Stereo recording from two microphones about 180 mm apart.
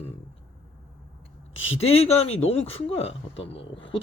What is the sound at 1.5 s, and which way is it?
Speech, 90° left.